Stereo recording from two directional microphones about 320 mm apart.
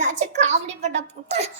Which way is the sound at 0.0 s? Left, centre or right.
Right.